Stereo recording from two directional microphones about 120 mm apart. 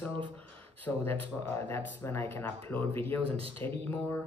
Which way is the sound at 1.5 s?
15° left (ahead or behind).